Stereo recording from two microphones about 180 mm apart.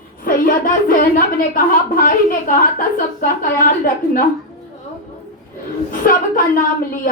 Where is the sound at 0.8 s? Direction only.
50° left (ahead or behind).